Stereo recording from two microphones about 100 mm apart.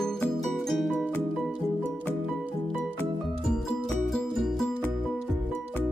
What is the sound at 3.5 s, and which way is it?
Music, 5° left (ahead or behind).